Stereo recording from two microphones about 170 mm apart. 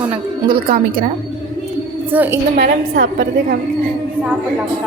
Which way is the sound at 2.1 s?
10° right (ahead or behind).